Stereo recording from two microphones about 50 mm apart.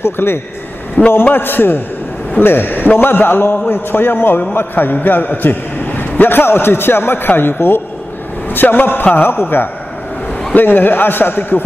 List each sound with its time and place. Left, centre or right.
0.0 s a man's voice: left
1.0 s a man's voice: left
8.5 s a man's voice: left